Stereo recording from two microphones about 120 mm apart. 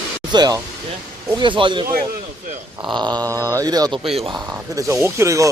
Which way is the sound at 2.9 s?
40° right (ahead or behind).